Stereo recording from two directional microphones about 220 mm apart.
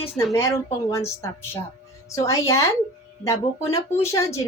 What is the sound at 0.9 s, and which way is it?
Speech, 15° left (ahead or behind).